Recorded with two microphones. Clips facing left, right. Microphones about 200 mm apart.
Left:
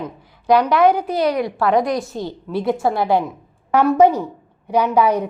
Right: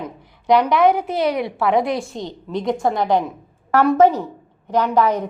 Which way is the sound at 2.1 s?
5° left (ahead or behind).